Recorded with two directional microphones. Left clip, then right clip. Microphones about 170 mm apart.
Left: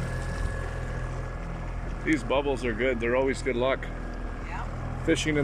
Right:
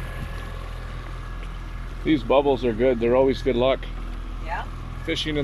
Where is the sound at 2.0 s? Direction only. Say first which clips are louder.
Right 7 dB; 25° right (ahead or behind).